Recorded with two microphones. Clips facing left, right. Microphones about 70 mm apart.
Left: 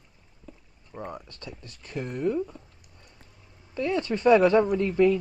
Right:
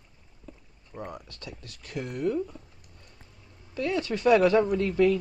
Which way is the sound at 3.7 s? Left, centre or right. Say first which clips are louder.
Left 2 dB; left.